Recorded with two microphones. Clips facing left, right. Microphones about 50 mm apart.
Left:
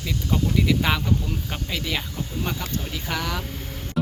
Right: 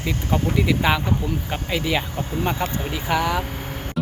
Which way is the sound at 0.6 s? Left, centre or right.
Centre.